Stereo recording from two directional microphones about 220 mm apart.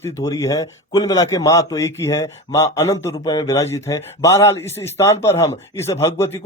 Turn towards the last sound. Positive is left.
turn(degrees=10)  # may be behind; listen again after turning